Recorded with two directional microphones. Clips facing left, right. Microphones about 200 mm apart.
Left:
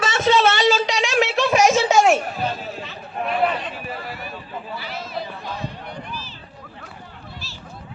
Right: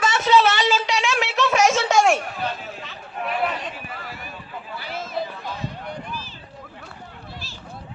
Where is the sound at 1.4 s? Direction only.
10° left (ahead or behind).